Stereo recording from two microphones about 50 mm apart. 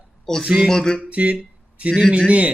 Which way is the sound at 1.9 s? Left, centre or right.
Centre.